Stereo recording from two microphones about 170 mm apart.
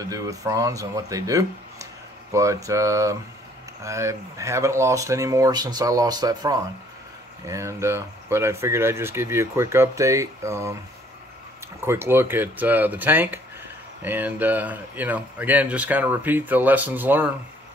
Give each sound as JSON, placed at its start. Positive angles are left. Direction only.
{"t": 0.0, "sound": "speech", "side_deg": -20}
{"t": 11.8, "sound": "speech", "side_deg": -15}